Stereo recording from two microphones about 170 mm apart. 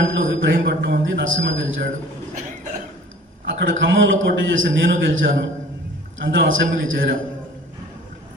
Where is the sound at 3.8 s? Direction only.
90° right.